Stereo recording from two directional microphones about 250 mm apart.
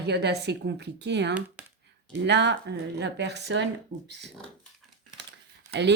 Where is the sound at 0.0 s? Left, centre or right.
Right.